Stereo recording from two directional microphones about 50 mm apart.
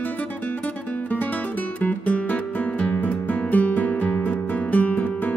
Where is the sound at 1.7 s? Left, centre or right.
Left.